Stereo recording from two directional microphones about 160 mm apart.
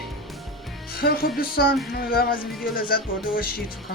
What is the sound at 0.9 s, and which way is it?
Speech, 70° left (ahead or behind).